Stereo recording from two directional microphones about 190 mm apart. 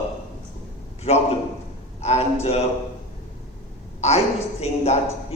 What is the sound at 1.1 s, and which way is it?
A man's voice, 30° left (ahead or behind).